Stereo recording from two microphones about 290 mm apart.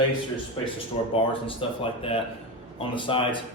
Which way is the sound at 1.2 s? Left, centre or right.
Centre.